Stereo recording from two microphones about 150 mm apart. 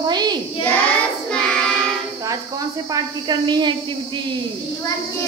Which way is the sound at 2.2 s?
20° right (ahead or behind).